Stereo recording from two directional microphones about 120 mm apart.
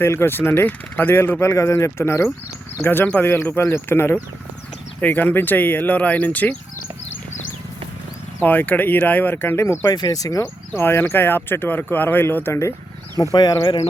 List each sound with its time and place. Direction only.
0.0 s speech: 20° left (ahead or behind)
8.4 s speech: 15° left (ahead or behind)
13.3 s speech: 35° left (ahead or behind)